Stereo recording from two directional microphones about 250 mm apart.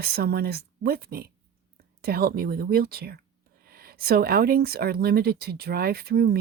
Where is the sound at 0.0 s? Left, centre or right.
Right.